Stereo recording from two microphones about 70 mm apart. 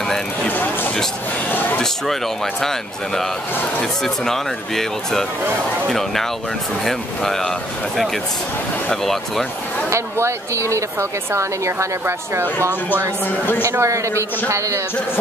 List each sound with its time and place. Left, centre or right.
1.5 s a sound: left
4.0 s speech: centre
9.0 s speech: centre
9.8 s a woman's voice: right
13.7 s a woman's voice: right